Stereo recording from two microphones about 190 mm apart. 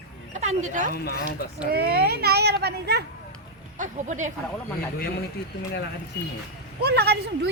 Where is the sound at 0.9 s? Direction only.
55° left (ahead or behind).